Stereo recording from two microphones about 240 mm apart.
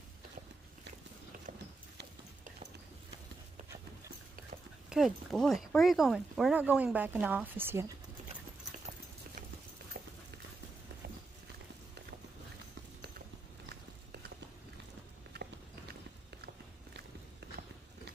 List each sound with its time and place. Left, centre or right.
4.8 s speech: centre
15.3 s walk: right